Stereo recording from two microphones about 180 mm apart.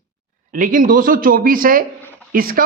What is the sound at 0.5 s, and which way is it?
Speech, 45° right (ahead or behind).